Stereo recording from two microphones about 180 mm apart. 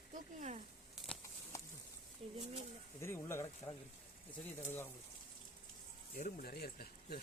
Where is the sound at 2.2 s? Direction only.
35° right (ahead or behind).